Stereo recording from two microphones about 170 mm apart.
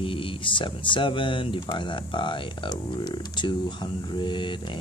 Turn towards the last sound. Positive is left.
turn(degrees=25)  # may be behind; listen again after turning